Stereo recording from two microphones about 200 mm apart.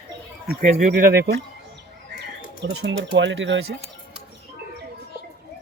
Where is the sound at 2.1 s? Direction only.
60° right (ahead or behind).